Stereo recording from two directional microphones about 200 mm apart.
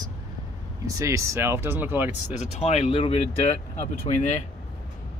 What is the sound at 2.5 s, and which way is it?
Speech, 30° left (ahead or behind).